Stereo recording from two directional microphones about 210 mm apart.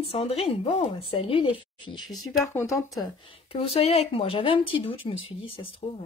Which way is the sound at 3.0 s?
25° left (ahead or behind).